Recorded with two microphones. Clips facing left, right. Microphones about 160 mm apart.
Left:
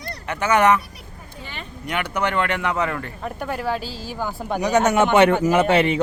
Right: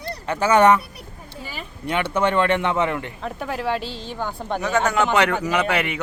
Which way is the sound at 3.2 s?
Centre (ahead or behind).